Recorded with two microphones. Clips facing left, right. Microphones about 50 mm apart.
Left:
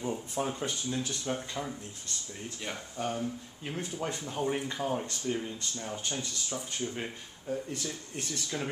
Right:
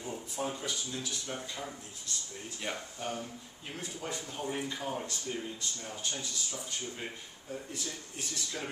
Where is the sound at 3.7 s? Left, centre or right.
Left.